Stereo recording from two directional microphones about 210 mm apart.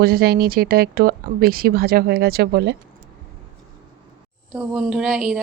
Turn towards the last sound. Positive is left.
turn(degrees=0)  # may be behind; listen again after turning